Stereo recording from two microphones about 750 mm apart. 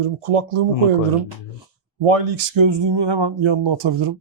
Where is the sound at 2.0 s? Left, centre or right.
Right.